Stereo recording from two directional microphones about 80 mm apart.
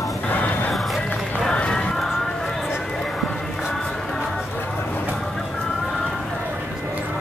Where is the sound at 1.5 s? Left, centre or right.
Centre.